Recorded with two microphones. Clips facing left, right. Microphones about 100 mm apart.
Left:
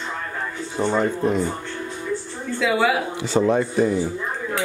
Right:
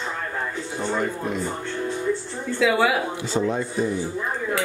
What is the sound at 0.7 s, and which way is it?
Speech, 25° left (ahead or behind).